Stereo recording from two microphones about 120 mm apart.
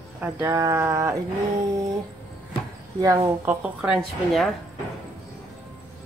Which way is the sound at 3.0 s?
30° right (ahead or behind).